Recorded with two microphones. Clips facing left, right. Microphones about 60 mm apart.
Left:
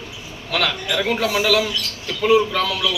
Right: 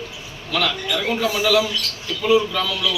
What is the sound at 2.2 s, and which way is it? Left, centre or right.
Speech, left.